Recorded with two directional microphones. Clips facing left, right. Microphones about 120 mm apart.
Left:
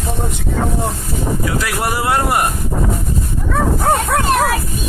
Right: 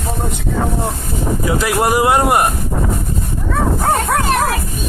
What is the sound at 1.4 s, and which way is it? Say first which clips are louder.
Speech: right 4 dB; 20° right (ahead or behind).